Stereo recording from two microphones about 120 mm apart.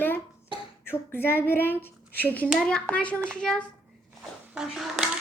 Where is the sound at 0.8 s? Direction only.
20° left (ahead or behind).